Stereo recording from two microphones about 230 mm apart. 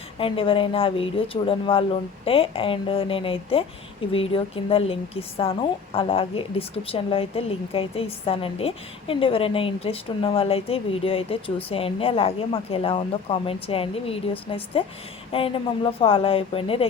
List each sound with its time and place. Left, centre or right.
0.2 s a woman's voice: left